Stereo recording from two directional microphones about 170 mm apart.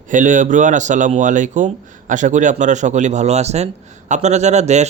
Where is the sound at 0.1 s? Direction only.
50° right (ahead or behind).